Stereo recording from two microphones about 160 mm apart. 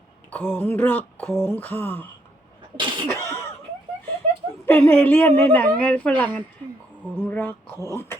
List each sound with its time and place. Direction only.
0.3 s speech: 10° left (ahead or behind)
2.7 s cough: 30° right (ahead or behind)
3.1 s cough: 15° left (ahead or behind)
4.6 s speech: 15° left (ahead or behind)